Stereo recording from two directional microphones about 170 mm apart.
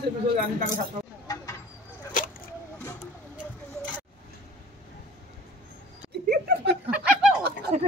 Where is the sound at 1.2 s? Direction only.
20° left (ahead or behind).